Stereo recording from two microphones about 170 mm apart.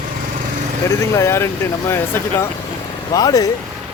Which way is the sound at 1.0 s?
15° left (ahead or behind).